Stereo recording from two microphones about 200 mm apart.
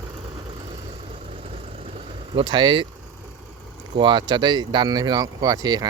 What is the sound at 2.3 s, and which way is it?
Speech, 25° right (ahead or behind).